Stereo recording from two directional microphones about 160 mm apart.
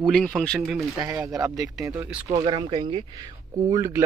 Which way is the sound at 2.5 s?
30° right (ahead or behind).